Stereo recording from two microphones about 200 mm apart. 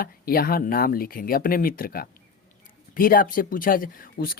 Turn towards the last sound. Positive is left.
turn(degrees=45)  # may be behind; listen again after turning